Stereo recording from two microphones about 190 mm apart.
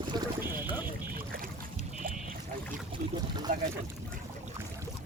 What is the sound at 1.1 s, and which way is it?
Boat, 50° right (ahead or behind).